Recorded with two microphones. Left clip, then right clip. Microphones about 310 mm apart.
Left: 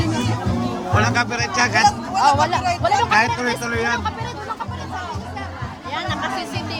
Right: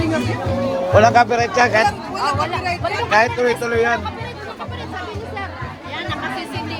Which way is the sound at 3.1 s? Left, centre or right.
Centre.